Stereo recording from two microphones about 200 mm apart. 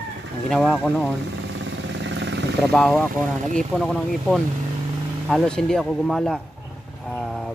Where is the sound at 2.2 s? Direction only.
65° right (ahead or behind).